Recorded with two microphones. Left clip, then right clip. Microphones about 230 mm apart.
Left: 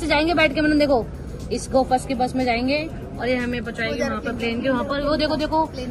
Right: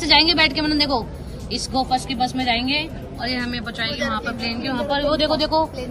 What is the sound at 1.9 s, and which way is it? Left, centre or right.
Speech, right.